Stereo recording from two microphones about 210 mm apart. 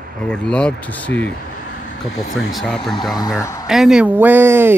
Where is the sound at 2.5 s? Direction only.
Centre (ahead or behind).